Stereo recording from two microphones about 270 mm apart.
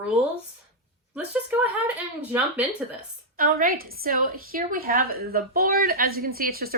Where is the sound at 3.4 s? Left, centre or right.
Right.